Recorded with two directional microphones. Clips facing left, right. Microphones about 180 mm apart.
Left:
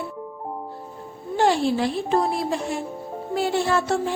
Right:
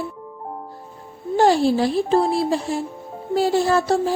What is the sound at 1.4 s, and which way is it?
A woman's voice, 35° right (ahead or behind).